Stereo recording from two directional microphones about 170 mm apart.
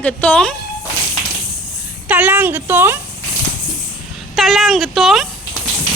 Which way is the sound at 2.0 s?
10° right (ahead or behind).